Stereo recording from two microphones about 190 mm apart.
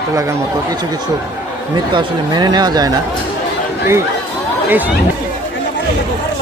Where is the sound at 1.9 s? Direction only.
20° right (ahead or behind).